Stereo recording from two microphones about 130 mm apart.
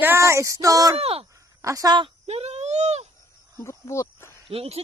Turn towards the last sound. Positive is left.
turn(degrees=-50)  # may be behind; listen again after turning